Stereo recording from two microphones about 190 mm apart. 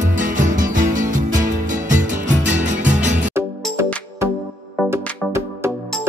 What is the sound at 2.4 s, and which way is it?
Music, 40° right (ahead or behind).